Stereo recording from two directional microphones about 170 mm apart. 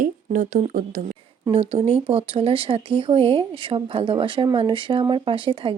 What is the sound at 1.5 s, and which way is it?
A woman's voice, 35° right (ahead or behind).